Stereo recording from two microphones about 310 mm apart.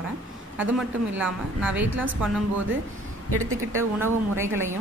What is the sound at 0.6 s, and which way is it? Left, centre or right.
A woman's voice, centre.